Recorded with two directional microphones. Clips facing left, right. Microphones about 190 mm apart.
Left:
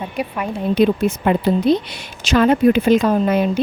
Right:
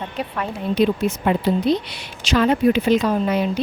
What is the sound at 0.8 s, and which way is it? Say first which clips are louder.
A woman's voice: left 3 dB; 55° left (ahead or behind).